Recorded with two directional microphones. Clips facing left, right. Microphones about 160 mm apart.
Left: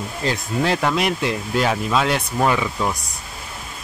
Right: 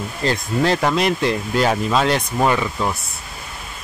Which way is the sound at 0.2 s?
5° left (ahead or behind).